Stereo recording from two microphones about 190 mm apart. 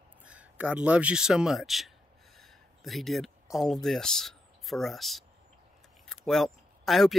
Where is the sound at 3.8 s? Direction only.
Centre (ahead or behind).